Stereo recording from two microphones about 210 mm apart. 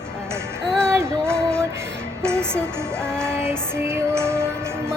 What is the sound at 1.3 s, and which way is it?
Music, 5° left (ahead or behind).